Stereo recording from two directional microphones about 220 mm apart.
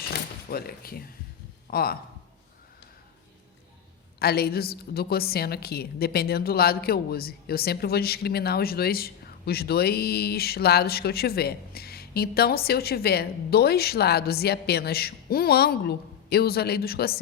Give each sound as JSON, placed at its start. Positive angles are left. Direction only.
{"t": 0.1, "sound": "a sound", "side_deg": 45}
{"t": 1.7, "sound": "a woman's voice", "side_deg": 45}
{"t": 4.2, "sound": "a woman's voice", "side_deg": 45}